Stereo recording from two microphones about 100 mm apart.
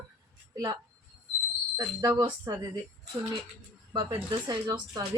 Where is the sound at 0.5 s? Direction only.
40° right (ahead or behind).